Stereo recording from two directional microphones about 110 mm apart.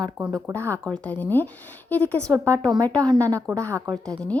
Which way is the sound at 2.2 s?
30° right (ahead or behind).